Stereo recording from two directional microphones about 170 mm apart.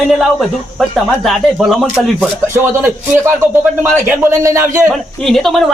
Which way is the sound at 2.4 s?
15° right (ahead or behind).